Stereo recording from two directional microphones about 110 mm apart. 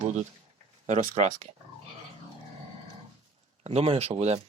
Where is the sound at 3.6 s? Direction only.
70° right (ahead or behind).